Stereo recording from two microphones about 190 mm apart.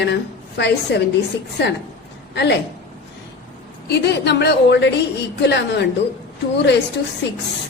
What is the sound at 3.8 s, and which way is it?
A woman's voice, 60° left (ahead or behind).